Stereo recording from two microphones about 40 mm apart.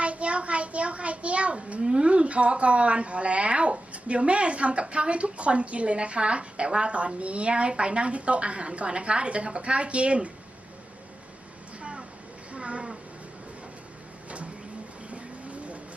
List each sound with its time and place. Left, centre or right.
0.0 s a child's voice: right
11.8 s a sound: right
14.3 s bird: right
15.1 s vehicle: right